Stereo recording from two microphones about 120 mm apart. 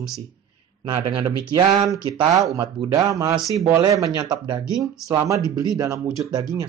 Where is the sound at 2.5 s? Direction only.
30° right (ahead or behind).